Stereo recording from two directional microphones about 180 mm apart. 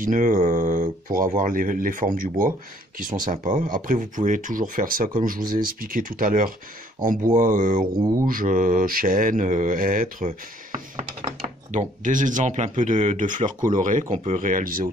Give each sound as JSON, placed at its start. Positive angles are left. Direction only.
{"t": 0.0, "sound": "speech", "side_deg": -45}